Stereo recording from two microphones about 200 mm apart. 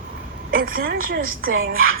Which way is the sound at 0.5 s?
45° right (ahead or behind).